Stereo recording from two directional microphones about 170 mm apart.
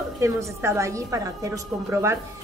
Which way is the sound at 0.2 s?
15° right (ahead or behind).